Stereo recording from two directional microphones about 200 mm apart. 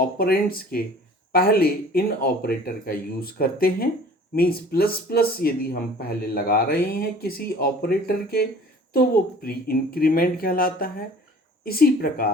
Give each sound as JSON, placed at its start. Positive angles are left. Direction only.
{"t": 0.0, "sound": "speech", "side_deg": 45}